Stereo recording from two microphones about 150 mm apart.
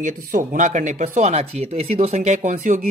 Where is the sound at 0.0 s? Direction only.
65° right (ahead or behind).